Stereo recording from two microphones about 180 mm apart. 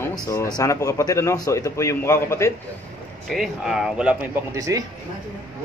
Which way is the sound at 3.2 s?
Centre (ahead or behind).